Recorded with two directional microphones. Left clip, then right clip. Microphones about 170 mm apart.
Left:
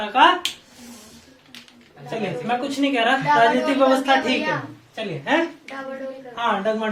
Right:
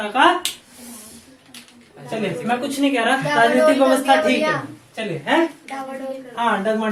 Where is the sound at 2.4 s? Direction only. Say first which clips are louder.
Right 2 dB; 25° left (ahead or behind).